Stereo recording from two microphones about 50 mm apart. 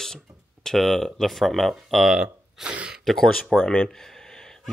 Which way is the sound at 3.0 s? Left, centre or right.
Centre.